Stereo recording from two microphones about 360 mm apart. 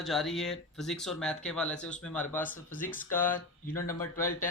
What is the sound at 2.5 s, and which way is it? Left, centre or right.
Speech, left.